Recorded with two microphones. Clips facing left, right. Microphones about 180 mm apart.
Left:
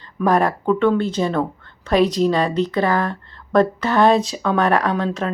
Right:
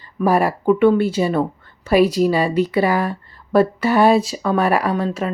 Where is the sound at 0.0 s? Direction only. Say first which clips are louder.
Right 1 dB; 10° right (ahead or behind).